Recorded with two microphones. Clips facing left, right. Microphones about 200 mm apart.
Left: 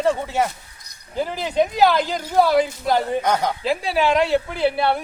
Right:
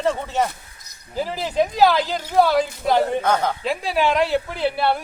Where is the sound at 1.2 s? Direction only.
Centre (ahead or behind).